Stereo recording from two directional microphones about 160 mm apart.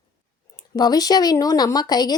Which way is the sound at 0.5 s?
25° left (ahead or behind).